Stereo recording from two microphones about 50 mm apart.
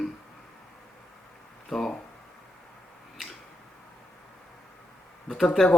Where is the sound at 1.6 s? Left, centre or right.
Centre.